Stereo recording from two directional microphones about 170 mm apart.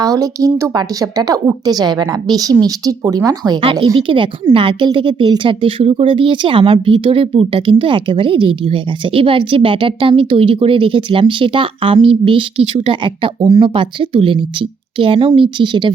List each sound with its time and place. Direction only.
0.0 s a woman's voice: 20° right (ahead or behind)